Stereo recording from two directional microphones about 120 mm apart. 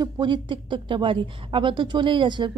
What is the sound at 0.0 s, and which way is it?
A woman's voice, 40° right (ahead or behind).